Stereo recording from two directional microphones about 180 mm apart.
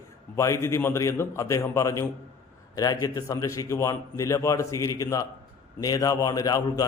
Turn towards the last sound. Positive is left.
turn(degrees=20)  # may be behind; listen again after turning